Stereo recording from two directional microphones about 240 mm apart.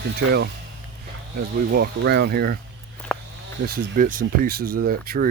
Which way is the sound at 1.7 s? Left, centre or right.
Right.